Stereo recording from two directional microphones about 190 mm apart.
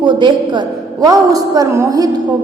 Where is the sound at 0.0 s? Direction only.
25° right (ahead or behind).